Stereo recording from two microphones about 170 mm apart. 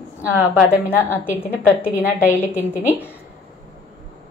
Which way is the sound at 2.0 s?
15° left (ahead or behind).